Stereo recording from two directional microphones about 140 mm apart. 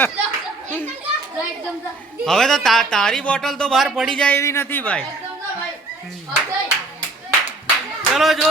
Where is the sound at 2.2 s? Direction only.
5° left (ahead or behind).